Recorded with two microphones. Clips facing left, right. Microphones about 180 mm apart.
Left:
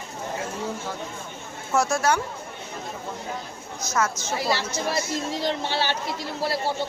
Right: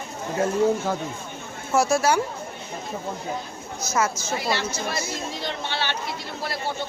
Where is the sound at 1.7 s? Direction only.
5° right (ahead or behind).